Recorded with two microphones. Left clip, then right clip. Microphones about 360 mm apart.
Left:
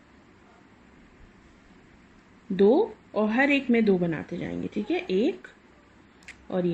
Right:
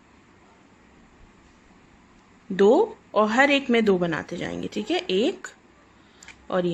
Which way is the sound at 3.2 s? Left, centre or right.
Right.